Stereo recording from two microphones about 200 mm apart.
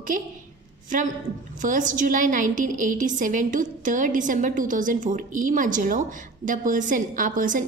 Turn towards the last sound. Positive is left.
turn(degrees=-40)  # may be behind; listen again after turning